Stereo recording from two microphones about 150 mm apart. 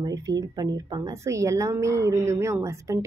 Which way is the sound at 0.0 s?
25° right (ahead or behind).